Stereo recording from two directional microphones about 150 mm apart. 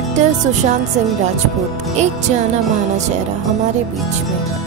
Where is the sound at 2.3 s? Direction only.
50° right (ahead or behind).